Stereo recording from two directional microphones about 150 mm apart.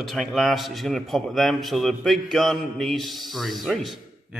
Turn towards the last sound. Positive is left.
turn(degrees=0)  # may be behind; listen again after turning